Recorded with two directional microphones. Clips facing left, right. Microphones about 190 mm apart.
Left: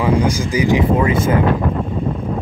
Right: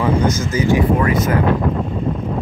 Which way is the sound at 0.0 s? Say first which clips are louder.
Left 1 dB; 10° left (ahead or behind).